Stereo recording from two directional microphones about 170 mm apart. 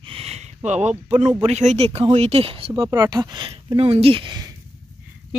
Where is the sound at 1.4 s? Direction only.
40° right (ahead or behind).